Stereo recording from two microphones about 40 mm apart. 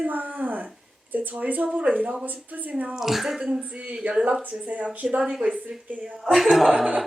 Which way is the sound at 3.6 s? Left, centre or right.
Right.